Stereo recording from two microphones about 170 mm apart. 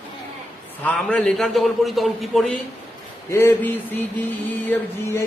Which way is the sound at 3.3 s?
10° left (ahead or behind).